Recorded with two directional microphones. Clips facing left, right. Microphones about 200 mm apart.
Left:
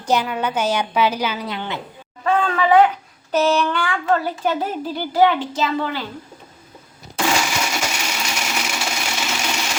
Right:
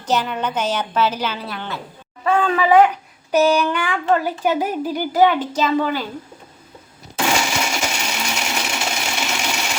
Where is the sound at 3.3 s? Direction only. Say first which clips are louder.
Right 2 dB; 10° right (ahead or behind).